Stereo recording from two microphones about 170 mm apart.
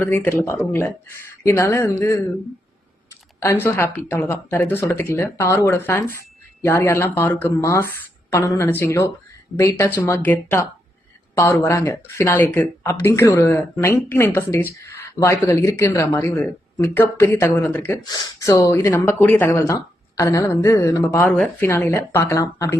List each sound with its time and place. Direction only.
0.0 s speech: 10° left (ahead or behind)
3.4 s speech: 15° left (ahead or behind)